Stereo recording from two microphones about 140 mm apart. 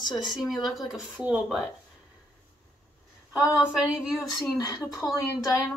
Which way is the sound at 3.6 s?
5° right (ahead or behind).